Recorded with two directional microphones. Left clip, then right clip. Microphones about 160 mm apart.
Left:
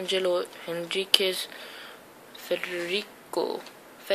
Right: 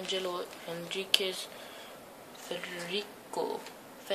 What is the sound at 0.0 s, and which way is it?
Speech, 25° left (ahead or behind).